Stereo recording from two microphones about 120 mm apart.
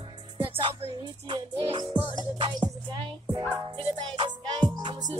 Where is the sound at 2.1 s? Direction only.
40° right (ahead or behind).